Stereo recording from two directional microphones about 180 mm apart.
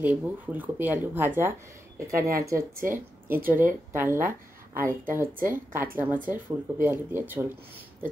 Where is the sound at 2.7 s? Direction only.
50° right (ahead or behind).